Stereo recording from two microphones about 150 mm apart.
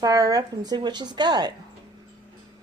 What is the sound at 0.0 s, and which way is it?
Speech, 25° right (ahead or behind).